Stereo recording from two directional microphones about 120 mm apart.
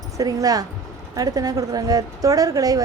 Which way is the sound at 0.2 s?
30° right (ahead or behind).